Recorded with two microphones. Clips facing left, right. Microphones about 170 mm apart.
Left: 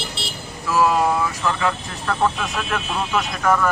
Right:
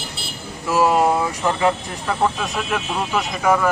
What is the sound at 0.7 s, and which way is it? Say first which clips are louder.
Speech: right 2 dB; 25° right (ahead or behind).